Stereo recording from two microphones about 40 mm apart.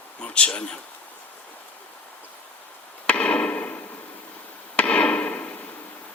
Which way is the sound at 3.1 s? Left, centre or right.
Left.